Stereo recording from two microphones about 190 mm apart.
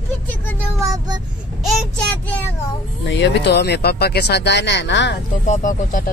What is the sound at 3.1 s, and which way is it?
Speech, 65° left (ahead or behind).